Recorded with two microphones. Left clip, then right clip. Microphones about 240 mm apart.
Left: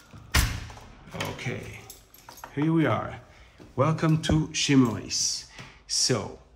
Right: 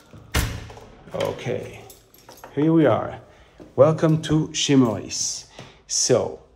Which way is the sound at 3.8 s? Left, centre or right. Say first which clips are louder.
Right 9 dB; centre.